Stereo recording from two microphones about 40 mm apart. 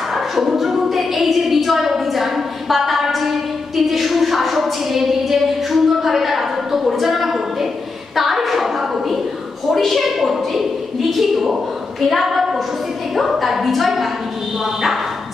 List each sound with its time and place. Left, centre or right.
0.1 s a woman's voice: centre
8.2 s a sound: centre
9.7 s a woman's voice: centre